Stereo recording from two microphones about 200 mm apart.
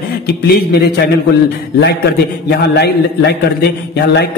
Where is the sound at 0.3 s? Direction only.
55° left (ahead or behind).